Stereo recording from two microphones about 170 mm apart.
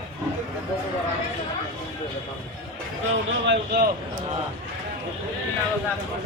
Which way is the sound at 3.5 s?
70° right (ahead or behind).